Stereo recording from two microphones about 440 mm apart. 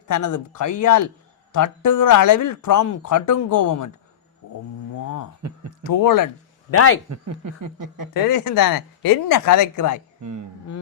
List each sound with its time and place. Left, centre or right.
0.1 s speech: left
4.4 s a sound: left
5.8 s speech: left
6.7 s speech: left
7.1 s speech: right
8.1 s speech: left